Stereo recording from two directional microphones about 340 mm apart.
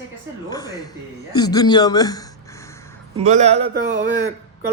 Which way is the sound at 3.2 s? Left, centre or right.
Centre.